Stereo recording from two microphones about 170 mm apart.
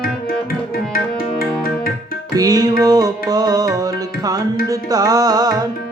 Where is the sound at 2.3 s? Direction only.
20° right (ahead or behind).